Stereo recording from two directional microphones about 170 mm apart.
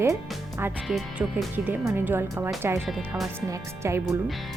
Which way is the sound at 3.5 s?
15° right (ahead or behind).